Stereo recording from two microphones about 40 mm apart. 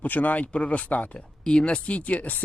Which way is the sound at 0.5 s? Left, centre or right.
Left.